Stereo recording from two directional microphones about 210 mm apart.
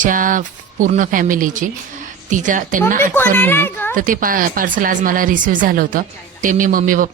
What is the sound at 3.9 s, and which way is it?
Speech, 40° right (ahead or behind).